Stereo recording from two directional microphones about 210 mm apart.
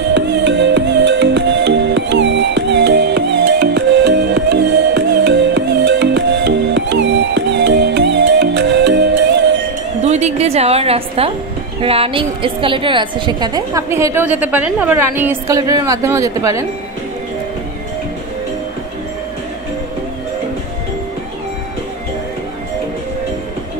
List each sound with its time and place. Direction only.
0.1 s music: 55° right (ahead or behind)
10.0 s music: 30° right (ahead or behind)
11.8 s a woman's voice: 25° right (ahead or behind)